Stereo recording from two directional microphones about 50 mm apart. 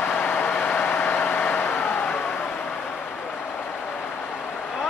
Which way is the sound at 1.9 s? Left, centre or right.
Left.